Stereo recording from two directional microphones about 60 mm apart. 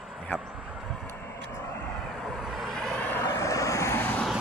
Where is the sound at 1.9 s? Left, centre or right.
Centre.